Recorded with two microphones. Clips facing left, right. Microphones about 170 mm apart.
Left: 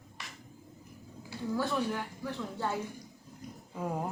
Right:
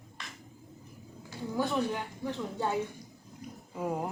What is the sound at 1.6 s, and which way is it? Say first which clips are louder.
Speech: right 3 dB; 20° right (ahead or behind).